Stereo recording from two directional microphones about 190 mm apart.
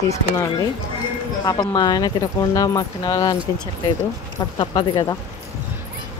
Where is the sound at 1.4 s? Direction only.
20° left (ahead or behind).